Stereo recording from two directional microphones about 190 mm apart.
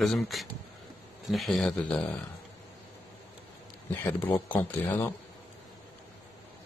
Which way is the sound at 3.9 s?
10° left (ahead or behind).